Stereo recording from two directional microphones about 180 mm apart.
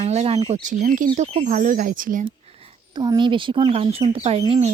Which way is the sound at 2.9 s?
25° right (ahead or behind).